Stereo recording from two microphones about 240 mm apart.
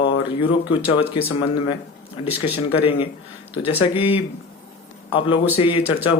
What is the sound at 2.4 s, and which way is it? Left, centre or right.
Speech, left.